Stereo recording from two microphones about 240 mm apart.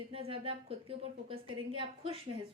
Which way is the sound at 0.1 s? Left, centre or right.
Right.